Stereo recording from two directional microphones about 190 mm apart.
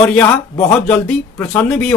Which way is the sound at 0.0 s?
5° left (ahead or behind).